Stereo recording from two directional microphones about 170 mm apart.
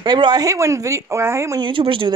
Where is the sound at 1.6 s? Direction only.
30° right (ahead or behind).